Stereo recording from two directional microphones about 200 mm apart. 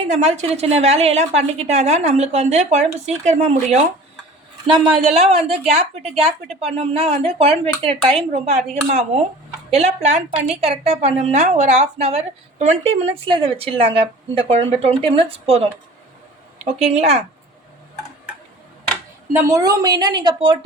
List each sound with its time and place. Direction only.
0.1 s a woman's voice: 35° right (ahead or behind)
5.1 s a woman's voice: 30° right (ahead or behind)
16.8 s a woman's voice: 35° right (ahead or behind)
19.3 s a woman's voice: 15° right (ahead or behind)